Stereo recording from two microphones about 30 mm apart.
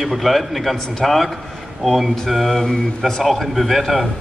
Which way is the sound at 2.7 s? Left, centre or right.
Centre.